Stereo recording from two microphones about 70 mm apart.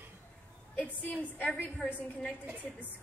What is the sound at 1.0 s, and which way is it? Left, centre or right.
Speech, left.